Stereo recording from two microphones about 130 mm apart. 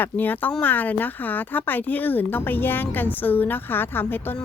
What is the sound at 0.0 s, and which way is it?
Speech, 15° left (ahead or behind).